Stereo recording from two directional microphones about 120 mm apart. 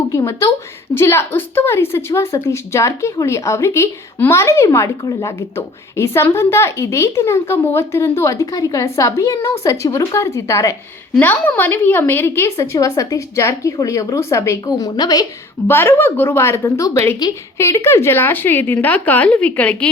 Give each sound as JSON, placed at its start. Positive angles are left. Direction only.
{"t": 0.1, "sound": "a woman's voice", "side_deg": 25}
{"t": 15.6, "sound": "a woman's voice", "side_deg": 20}